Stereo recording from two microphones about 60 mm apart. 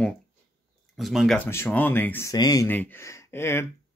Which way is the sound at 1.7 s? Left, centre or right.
Left.